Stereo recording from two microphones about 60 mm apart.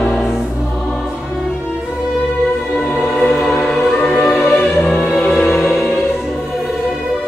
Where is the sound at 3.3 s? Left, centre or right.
Centre.